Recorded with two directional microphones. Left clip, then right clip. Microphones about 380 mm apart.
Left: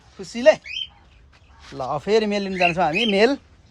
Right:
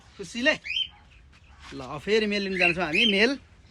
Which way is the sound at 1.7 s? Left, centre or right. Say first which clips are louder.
Left 6 dB; left.